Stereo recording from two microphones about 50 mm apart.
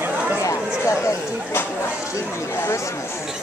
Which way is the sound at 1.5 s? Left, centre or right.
Left.